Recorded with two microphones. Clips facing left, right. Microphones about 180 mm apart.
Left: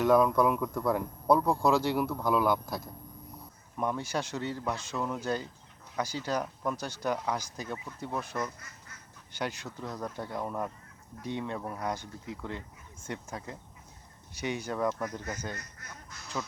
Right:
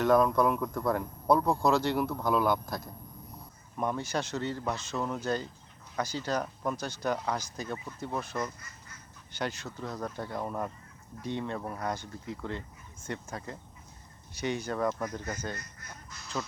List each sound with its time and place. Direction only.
0.0 s speech: 10° left (ahead or behind)
15.5 s goose: 55° left (ahead or behind)